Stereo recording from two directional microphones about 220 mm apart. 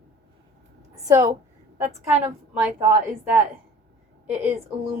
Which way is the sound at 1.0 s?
10° right (ahead or behind).